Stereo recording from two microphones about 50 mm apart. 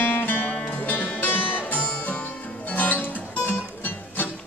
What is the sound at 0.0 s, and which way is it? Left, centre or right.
Music, left.